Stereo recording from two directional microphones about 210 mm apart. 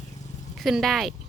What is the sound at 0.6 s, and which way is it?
Speech, centre (ahead or behind).